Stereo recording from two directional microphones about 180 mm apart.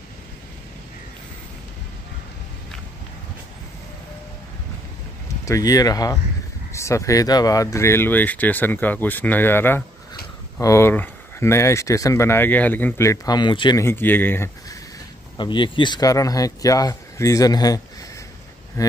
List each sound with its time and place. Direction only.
5.4 s speech: 20° left (ahead or behind)
13.8 s speech: 10° left (ahead or behind)
15.3 s speech: 25° left (ahead or behind)
18.8 s speech: 20° left (ahead or behind)